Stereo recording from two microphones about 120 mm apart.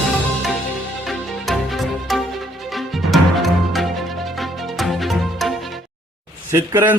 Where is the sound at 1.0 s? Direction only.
Centre (ahead or behind).